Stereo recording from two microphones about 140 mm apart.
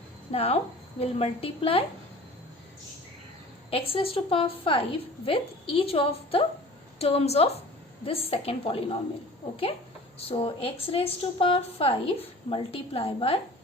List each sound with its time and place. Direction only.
0.3 s a woman's voice: 45° left (ahead or behind)
3.7 s a woman's voice: 40° left (ahead or behind)
10.2 s a woman's voice: 40° left (ahead or behind)